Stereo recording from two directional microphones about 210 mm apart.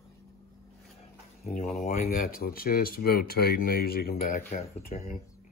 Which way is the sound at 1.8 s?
40° left (ahead or behind).